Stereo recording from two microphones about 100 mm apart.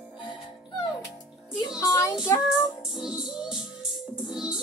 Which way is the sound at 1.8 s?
30° left (ahead or behind).